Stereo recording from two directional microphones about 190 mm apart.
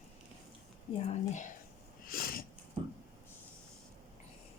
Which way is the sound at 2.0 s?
50° left (ahead or behind).